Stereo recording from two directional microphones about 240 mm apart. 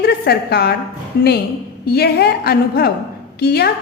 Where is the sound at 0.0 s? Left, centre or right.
Left.